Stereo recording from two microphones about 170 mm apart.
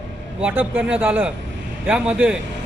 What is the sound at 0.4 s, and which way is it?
Speech, 10° right (ahead or behind).